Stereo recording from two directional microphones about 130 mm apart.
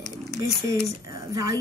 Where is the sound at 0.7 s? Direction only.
25° right (ahead or behind).